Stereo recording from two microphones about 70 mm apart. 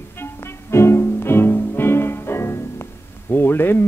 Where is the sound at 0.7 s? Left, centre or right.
Left.